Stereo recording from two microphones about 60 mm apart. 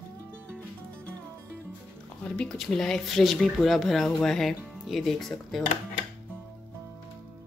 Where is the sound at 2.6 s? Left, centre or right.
Centre.